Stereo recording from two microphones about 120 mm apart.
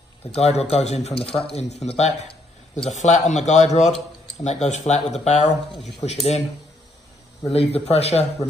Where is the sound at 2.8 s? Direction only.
75° left (ahead or behind).